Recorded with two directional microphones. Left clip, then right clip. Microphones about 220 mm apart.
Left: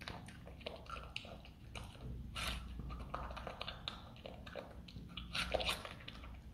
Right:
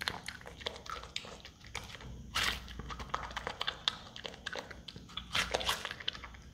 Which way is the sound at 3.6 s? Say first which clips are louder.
Right 11 dB; 25° right (ahead or behind).